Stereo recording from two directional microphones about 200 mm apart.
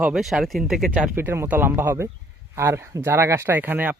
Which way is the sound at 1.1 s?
10° right (ahead or behind).